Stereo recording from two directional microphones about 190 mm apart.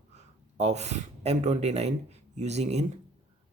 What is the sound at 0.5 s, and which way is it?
Speech, 35° right (ahead or behind).